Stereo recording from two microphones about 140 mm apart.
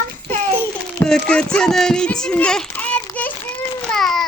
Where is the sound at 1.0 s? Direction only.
5° left (ahead or behind).